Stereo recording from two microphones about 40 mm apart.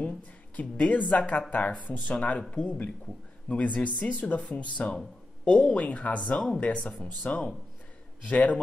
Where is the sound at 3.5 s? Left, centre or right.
Left.